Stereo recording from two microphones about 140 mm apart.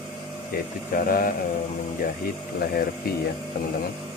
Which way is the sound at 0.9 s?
90° left.